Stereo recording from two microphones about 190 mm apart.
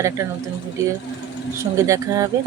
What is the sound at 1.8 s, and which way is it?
Speech, 15° right (ahead or behind).